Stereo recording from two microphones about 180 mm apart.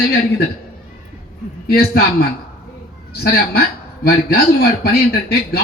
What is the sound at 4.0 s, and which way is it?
Speech, 60° left (ahead or behind).